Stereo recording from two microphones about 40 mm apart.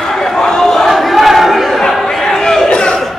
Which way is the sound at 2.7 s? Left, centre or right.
Left.